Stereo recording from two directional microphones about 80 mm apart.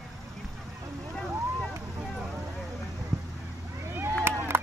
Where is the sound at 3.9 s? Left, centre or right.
Right.